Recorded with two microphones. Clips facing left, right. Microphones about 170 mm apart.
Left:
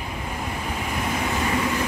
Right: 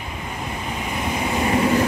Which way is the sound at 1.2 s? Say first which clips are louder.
Right 7 dB; 25° right (ahead or behind).